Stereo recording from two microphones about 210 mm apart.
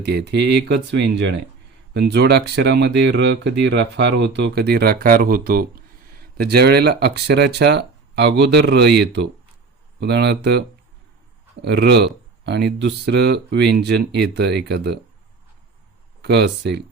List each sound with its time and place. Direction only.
0.0 s speech: 50° right (ahead or behind)
11.6 s speech: 55° right (ahead or behind)
16.2 s speech: 55° right (ahead or behind)